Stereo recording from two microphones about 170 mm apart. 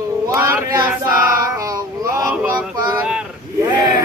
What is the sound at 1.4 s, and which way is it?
Male singing, 20° right (ahead or behind).